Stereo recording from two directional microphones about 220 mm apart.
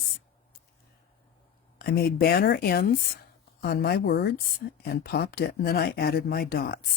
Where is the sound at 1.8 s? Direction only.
45° left (ahead or behind).